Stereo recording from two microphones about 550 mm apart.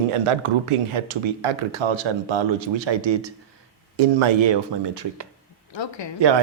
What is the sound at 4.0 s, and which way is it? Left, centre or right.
Speech, right.